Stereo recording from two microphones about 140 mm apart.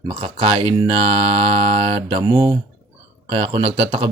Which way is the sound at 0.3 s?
35° right (ahead or behind).